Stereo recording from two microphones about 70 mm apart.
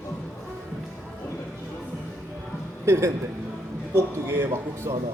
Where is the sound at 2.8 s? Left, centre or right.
Right.